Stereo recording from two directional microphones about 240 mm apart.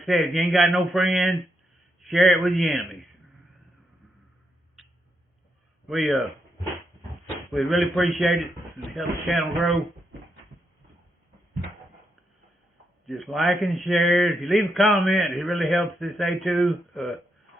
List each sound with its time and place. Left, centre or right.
0.0 s a man's voice: centre
5.9 s a man's voice: centre
7.5 s a man's voice: centre
13.1 s a man's voice: centre